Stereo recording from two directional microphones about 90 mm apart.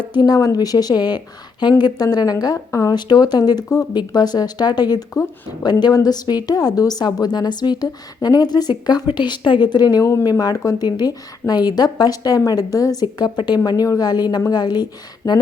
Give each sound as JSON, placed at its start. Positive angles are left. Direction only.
{"t": 0.1, "sound": "a woman's voice", "side_deg": 50}
{"t": 10.0, "sound": "speech", "side_deg": 35}
{"t": 10.2, "sound": "a woman's voice", "side_deg": 45}
{"t": 13.7, "sound": "a woman's voice", "side_deg": 40}